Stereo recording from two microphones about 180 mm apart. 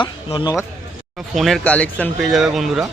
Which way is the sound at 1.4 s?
Centre (ahead or behind).